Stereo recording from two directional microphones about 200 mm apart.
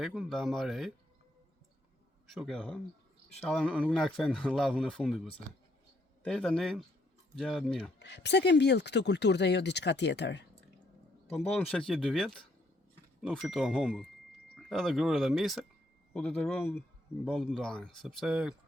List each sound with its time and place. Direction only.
0.0 s speech: centre (ahead or behind)
2.3 s speech: centre (ahead or behind)
7.9 s speech: 60° left (ahead or behind)
11.9 s speech: centre (ahead or behind)